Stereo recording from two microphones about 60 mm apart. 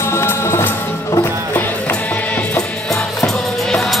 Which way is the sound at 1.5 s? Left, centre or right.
Left.